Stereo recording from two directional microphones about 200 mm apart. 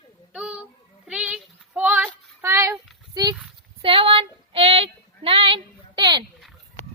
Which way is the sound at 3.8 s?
25° right (ahead or behind).